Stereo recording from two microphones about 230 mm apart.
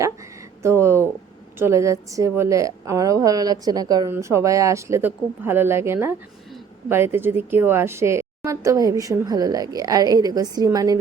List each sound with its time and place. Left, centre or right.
0.6 s a woman's voice: centre